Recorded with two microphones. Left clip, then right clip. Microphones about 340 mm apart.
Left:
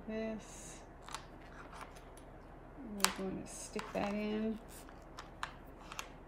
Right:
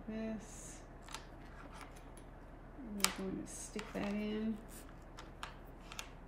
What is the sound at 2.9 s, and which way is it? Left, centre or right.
Speech, centre.